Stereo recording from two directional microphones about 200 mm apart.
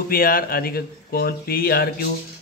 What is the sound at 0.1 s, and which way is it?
A man's voice, 45° left (ahead or behind).